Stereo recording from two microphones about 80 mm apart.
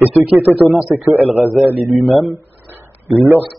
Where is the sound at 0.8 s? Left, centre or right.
Centre.